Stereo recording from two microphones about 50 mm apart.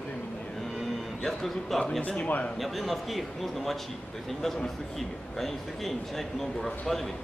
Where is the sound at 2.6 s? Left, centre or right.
Centre.